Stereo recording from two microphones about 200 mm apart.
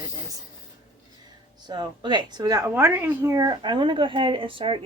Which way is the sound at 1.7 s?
20° right (ahead or behind).